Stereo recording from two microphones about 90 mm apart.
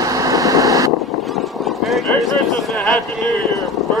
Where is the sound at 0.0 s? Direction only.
40° right (ahead or behind).